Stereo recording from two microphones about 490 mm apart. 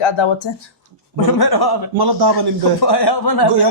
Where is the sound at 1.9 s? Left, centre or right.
Right.